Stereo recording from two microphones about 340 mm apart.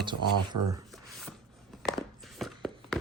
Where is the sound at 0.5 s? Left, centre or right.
Right.